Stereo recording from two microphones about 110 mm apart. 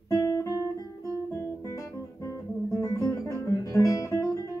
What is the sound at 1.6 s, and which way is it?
Guitar, 30° left (ahead or behind).